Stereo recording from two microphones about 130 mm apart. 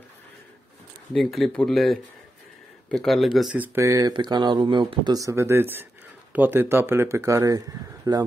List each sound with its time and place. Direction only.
1.1 s speech: centre (ahead or behind)
3.5 s speech: 15° right (ahead or behind)
4.1 s speech: 35° right (ahead or behind)